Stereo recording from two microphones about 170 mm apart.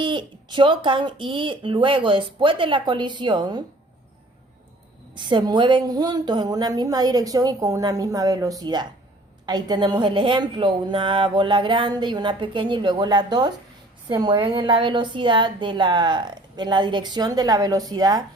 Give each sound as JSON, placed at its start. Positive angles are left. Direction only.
{"t": 0.0, "sound": "a woman's voice", "side_deg": -30}
{"t": 5.1, "sound": "a woman's voice", "side_deg": -25}